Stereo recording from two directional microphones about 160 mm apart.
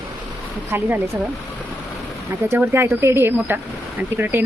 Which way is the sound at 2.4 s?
15° right (ahead or behind).